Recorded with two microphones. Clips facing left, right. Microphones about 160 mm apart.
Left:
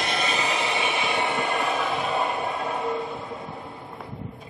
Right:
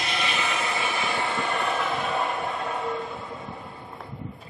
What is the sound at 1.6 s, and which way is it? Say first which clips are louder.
Music: left 1 dB; centre (ahead or behind).